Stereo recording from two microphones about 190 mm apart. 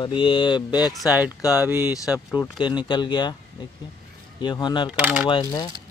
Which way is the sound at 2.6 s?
25° left (ahead or behind).